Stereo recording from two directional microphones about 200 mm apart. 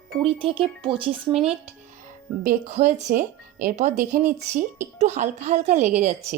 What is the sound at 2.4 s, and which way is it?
Speech, 40° right (ahead or behind).